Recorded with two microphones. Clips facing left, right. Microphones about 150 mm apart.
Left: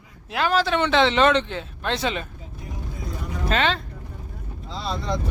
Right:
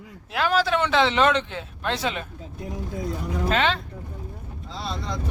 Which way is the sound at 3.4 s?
10° right (ahead or behind).